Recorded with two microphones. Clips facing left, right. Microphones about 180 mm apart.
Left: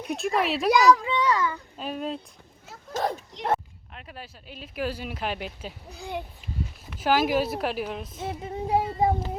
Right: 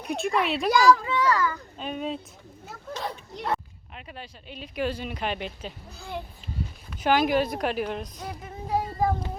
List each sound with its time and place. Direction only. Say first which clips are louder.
0.2 s speech: even; centre (ahead or behind)
1.0 s a child's voice: even; 20° left (ahead or behind)
1.8 s speech: even; centre (ahead or behind)
2.9 s speech: left 6 dB; 45° left (ahead or behind)
3.9 s speech: right 1 dB; centre (ahead or behind)
5.9 s a child's voice: left 3 dB; 15° left (ahead or behind)
6.9 s speech: right 1 dB; 5° left (ahead or behind)
8.2 s speech: left 6 dB; 25° left (ahead or behind)